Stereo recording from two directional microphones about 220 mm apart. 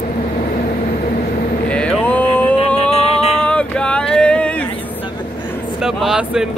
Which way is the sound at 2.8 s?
30° left (ahead or behind).